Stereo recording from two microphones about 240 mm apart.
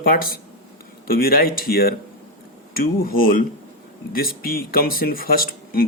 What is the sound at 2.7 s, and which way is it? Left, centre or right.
Speech, left.